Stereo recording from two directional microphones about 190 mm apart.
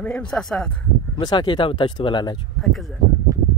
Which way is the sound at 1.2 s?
25° left (ahead or behind).